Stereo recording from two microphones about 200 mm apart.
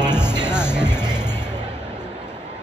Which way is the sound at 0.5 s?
5° right (ahead or behind).